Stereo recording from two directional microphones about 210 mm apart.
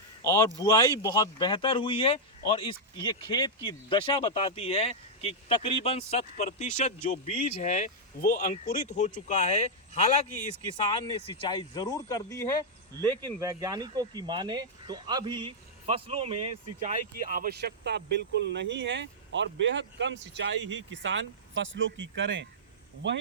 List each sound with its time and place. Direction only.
0.2 s speech: 15° left (ahead or behind); by 10.2 s 30° left (ahead or behind)
11.3 s speech: 20° left (ahead or behind)
13.4 s speech: 15° right (ahead or behind); by 23.2 s 60° right (ahead or behind)